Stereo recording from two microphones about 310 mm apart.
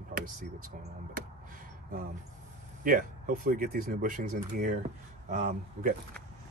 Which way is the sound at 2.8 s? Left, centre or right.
Right.